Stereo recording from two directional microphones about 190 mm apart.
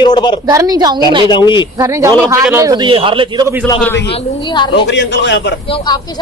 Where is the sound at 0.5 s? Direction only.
20° right (ahead or behind).